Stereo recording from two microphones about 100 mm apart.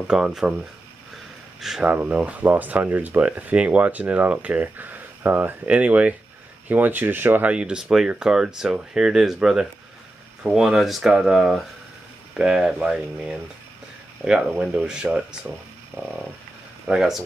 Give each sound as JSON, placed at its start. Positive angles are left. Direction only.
{"t": 0.0, "sound": "speech", "side_deg": -5}
{"t": 1.6, "sound": "speech", "side_deg": -5}
{"t": 1.9, "sound": "speech", "side_deg": -15}
{"t": 14.7, "sound": "speech", "side_deg": -10}
{"t": 16.8, "sound": "speech", "side_deg": -5}